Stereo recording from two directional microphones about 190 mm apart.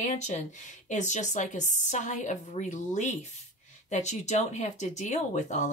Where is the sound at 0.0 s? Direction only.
40° left (ahead or behind).